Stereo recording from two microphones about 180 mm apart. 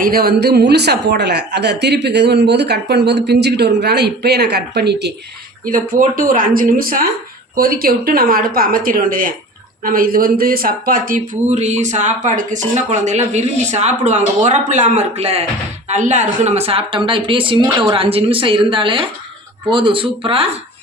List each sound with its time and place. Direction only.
0.0 s a woman's voice: 55° right (ahead or behind)
5.6 s speech: 50° right (ahead or behind); by 20.5 s 30° right (ahead or behind)